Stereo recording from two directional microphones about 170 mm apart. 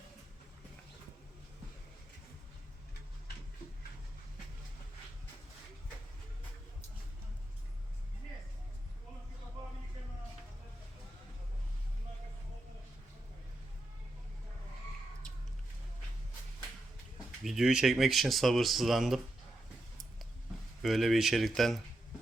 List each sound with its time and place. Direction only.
17.4 s speech: centre (ahead or behind)
20.8 s speech: centre (ahead or behind)